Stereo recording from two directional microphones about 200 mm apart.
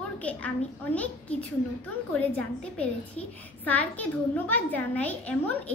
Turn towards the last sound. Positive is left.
turn(degrees=5)  # may be behind; listen again after turning